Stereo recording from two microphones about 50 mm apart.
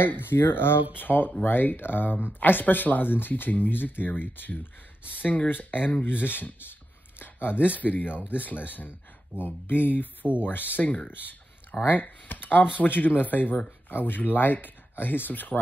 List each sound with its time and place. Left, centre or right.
0.0 s speech: left
7.2 s a sound: left
7.8 s speech: left
10.2 s speech: centre
10.7 s speech: left